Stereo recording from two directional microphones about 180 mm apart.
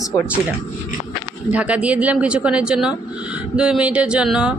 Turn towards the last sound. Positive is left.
turn(degrees=-5)  # may be behind; listen again after turning